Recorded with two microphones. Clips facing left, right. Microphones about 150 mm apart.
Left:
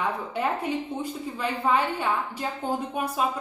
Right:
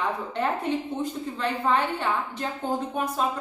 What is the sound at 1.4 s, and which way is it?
A woman's voice, 10° left (ahead or behind).